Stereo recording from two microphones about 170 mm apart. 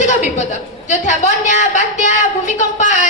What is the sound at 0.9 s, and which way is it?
A woman's voice, 45° left (ahead or behind).